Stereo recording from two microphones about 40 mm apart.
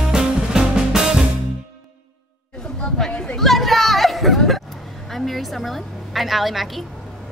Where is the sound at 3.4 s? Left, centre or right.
Centre.